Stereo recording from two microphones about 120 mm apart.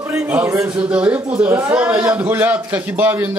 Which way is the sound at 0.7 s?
10° right (ahead or behind).